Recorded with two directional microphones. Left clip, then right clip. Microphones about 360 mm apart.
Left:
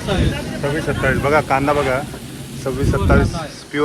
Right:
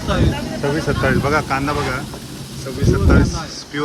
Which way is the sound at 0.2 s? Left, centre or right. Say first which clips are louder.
Right 1 dB; right.